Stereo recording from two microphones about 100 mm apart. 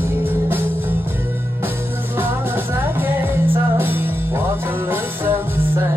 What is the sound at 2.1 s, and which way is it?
Music, 20° right (ahead or behind).